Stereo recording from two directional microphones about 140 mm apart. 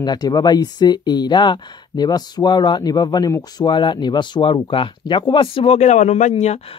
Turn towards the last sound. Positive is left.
turn(degrees=50)  # may be behind; listen again after turning